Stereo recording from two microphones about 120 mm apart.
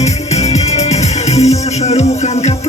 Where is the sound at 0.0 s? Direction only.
65° left (ahead or behind).